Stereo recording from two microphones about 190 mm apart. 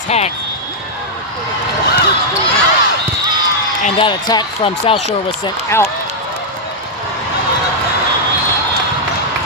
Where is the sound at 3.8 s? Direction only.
25° left (ahead or behind).